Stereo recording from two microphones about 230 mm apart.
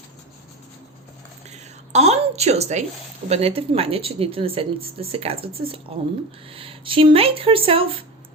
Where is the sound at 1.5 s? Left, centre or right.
Right.